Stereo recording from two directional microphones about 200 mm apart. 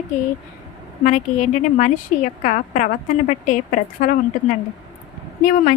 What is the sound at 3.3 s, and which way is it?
Speech, 40° left (ahead or behind).